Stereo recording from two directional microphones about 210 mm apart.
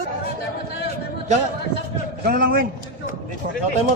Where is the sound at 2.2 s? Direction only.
45° right (ahead or behind).